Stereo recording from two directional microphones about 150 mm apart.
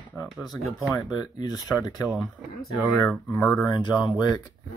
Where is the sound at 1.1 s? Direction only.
25° left (ahead or behind).